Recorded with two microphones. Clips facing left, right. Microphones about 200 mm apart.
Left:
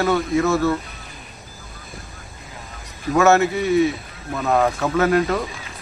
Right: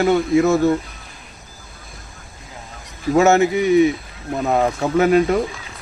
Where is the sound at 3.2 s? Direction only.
15° right (ahead or behind).